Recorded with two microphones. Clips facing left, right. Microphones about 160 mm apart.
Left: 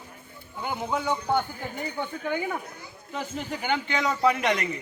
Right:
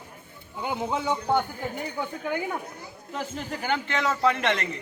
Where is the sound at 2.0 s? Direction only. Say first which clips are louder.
Left 1 dB; 5° right (ahead or behind).